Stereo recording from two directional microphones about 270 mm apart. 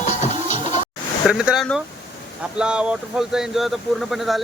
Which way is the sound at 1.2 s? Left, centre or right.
Centre.